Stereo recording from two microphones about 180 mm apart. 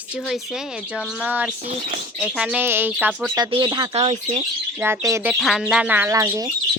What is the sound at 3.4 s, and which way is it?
Speech, 25° right (ahead or behind).